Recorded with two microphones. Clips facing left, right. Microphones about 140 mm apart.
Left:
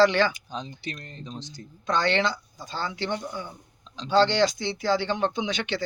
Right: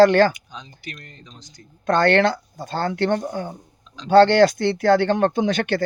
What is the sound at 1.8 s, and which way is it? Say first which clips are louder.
Speech: right 8 dB; 55° right (ahead or behind).